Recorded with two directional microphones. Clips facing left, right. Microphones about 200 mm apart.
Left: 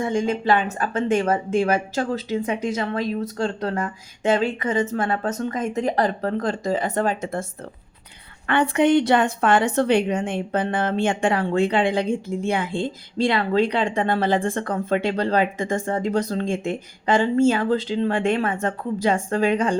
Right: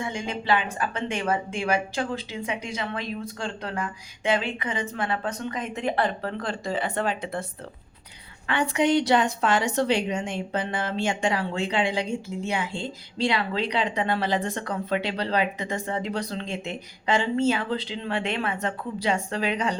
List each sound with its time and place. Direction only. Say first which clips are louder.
0.0 s speech: left 8 dB; 45° left (ahead or behind)
8.4 s a woman's voice: left 5 dB; 55° left (ahead or behind)